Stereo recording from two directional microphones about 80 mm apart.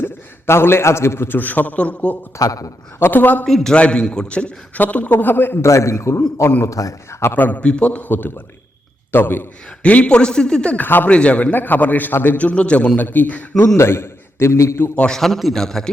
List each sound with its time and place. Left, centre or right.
0.0 s a man's voice: left
2.4 s a man's voice: left
3.0 s speech: left
3.4 s a man's voice: centre; by 5.5 s left
5.6 s a man's voice: left
7.2 s a man's voice: left
13.7 s a man's voice: left
14.9 s a man's voice: centre